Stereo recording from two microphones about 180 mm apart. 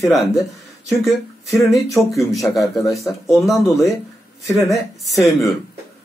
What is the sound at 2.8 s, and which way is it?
Speech, 15° left (ahead or behind).